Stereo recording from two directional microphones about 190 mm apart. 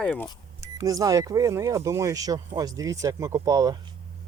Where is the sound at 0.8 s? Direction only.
15° right (ahead or behind).